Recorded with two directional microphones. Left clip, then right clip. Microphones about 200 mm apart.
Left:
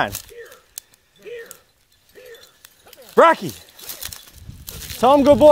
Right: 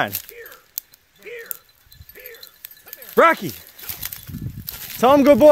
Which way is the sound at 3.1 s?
20° right (ahead or behind).